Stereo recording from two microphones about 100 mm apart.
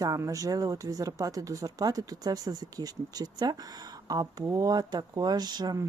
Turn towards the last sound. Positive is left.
turn(degrees=-45)  # may be behind; listen again after turning